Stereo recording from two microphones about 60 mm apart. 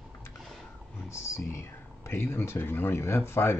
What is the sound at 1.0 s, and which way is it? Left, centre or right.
Speech, left.